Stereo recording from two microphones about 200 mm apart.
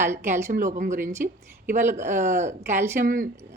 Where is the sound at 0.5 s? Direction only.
40° right (ahead or behind).